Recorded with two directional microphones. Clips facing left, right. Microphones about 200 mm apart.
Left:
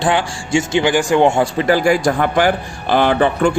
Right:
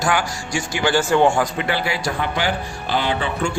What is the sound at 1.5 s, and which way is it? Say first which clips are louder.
Speech: left 9 dB; 40° left (ahead or behind).